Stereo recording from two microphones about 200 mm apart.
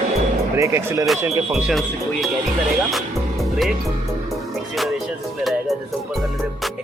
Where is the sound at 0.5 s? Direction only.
15° right (ahead or behind).